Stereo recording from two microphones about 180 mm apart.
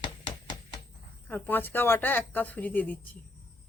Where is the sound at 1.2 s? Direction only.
10° left (ahead or behind).